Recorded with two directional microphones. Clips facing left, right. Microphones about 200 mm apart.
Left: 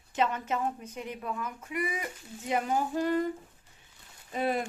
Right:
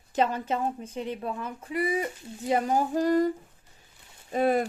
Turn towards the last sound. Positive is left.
turn(degrees=-45)  # may be behind; listen again after turning